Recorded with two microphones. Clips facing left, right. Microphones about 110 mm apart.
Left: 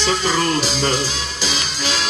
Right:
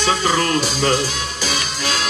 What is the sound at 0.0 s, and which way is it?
Speech, 55° right (ahead or behind).